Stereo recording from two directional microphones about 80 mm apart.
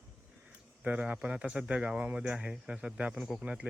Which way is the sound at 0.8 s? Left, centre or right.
Centre.